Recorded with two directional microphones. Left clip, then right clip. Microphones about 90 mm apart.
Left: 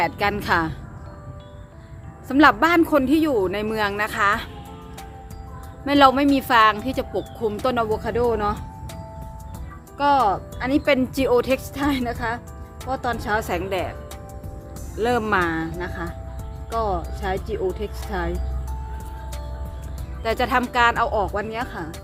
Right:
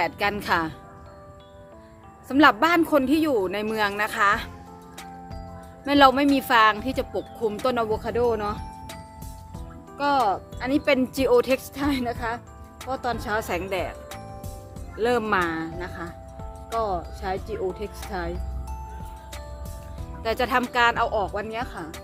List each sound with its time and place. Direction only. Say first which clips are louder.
0.0 s a woman's voice: left 3 dB; 30° right (ahead or behind)
2.2 s speech: left 2 dB; 30° right (ahead or behind); by 4.4 s 45° right (ahead or behind)
5.8 s speech: left 2 dB; 45° right (ahead or behind)
10.0 s speech: left 4 dB; 35° right (ahead or behind); by 13.9 s 50° right (ahead or behind)
14.9 s speech: left 2 dB; 45° right (ahead or behind)
16.7 s speech: left 2 dB; centre (ahead or behind)
17.2 s speech: left 3 dB; 40° right (ahead or behind)
20.2 s speech: left 2 dB; 40° right (ahead or behind)